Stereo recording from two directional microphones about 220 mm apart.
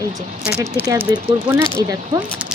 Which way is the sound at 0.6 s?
10° right (ahead or behind).